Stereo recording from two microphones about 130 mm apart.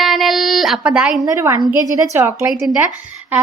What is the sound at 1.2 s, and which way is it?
A woman's voice, 20° right (ahead or behind).